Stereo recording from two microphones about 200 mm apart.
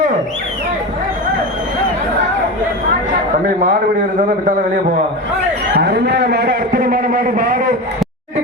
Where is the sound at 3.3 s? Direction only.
40° right (ahead or behind).